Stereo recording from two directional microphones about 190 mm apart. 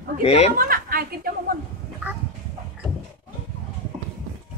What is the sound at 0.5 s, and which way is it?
Speech, 50° right (ahead or behind).